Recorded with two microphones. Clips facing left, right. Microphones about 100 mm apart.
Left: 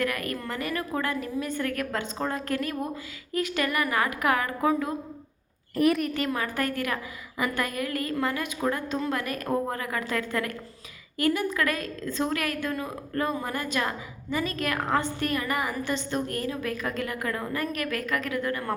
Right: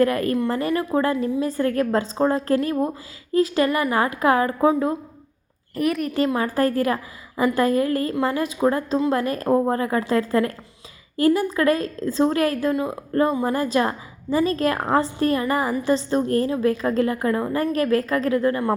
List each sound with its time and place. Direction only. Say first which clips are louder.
0.0 s a woman's voice: right 10 dB; 30° right (ahead or behind)
5.7 s a woman's voice: even; centre (ahead or behind)
6.1 s a woman's voice: right 8 dB; 30° right (ahead or behind)